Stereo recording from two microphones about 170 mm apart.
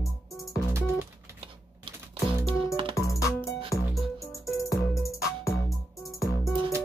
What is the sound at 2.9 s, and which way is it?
Music, 20° left (ahead or behind).